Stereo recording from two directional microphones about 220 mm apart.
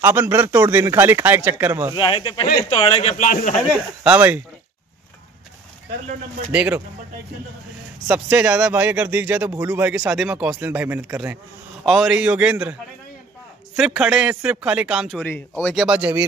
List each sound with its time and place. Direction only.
0.0 s speech: 10° right (ahead or behind)
2.0 s speech: 25° left (ahead or behind)
4.0 s speech: 5° right (ahead or behind)
6.5 s a man's voice: 5° right (ahead or behind)
8.1 s a man's voice: 5° right (ahead or behind)
13.7 s a man's voice: 5° right (ahead or behind)